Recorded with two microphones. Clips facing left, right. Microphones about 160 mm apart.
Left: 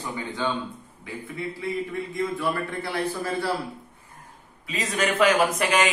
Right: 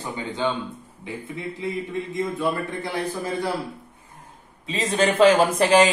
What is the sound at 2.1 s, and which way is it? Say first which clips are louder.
Speech: right 2 dB; 20° right (ahead or behind).